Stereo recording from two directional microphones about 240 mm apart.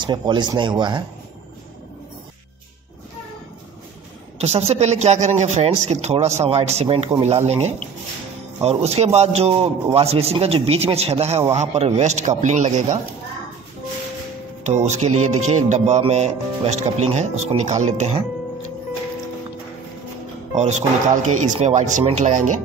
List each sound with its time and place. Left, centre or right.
0.0 s a man's voice: centre
4.4 s a man's voice: right
14.6 s a man's voice: right
15.3 s music: right
15.7 s a man's voice: right
20.5 s a man's voice: right